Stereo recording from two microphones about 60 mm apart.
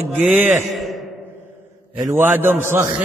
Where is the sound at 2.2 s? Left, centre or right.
Right.